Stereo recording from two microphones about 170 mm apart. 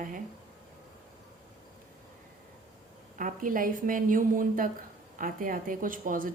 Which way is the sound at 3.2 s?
50° right (ahead or behind).